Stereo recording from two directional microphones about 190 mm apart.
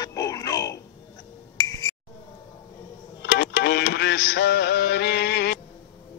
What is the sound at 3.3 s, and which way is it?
Music, 60° left (ahead or behind).